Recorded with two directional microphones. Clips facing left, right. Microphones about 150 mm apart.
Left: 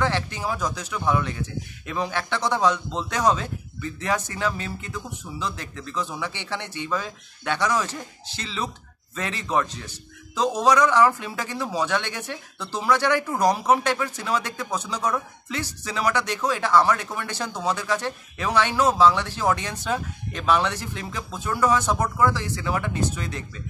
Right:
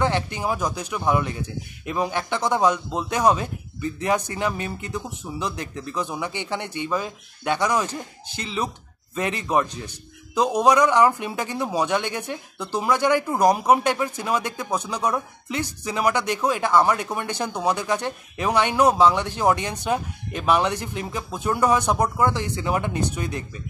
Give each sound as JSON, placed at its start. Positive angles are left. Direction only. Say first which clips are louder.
{"t": 0.0, "sound": "a man's voice", "louder": "right 2 dB", "side_deg": -15}